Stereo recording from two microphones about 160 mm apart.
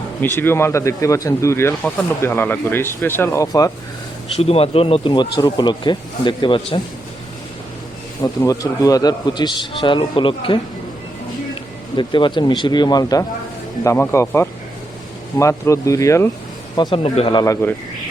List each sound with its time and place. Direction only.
0.2 s speech: 15° left (ahead or behind)
4.4 s speech: 40° left (ahead or behind)
8.2 s speech: 20° left (ahead or behind)
11.9 s speech: 30° left (ahead or behind)
17.4 s speech: 15° left (ahead or behind)